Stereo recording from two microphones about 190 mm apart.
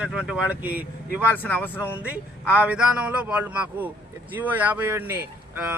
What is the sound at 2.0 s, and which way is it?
Speech, 5° right (ahead or behind).